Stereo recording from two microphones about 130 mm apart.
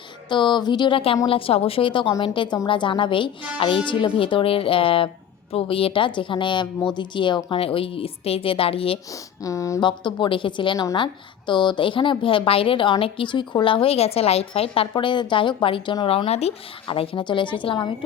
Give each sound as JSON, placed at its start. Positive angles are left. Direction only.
{"t": 0.3, "sound": "a woman's voice", "side_deg": 35}
{"t": 9.4, "sound": "speech", "side_deg": 25}
{"t": 9.8, "sound": "a woman's voice", "side_deg": 35}